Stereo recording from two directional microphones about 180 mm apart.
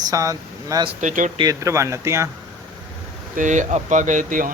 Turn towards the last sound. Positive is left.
turn(degrees=-45)  # may be behind; listen again after turning